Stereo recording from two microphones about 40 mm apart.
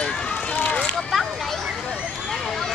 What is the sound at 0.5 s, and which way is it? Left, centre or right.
Speech, left.